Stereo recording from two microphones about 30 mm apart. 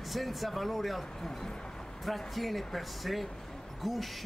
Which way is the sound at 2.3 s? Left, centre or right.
Centre.